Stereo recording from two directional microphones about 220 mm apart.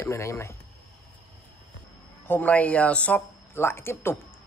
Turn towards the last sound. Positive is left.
turn(degrees=10)  # may be behind; listen again after turning